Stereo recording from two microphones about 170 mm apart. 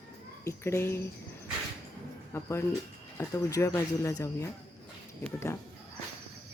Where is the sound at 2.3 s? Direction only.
15° left (ahead or behind).